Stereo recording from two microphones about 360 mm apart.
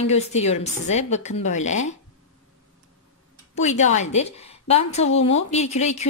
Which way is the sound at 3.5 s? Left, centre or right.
Centre.